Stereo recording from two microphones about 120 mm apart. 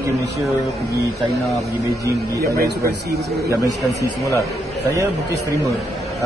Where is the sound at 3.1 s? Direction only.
25° right (ahead or behind).